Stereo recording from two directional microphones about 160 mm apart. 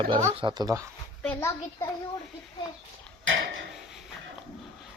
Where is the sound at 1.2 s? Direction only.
10° left (ahead or behind).